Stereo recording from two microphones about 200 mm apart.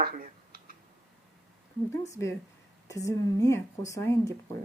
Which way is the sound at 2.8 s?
15° left (ahead or behind).